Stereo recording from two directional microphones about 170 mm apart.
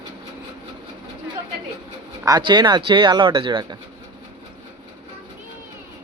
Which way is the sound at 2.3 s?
25° right (ahead or behind).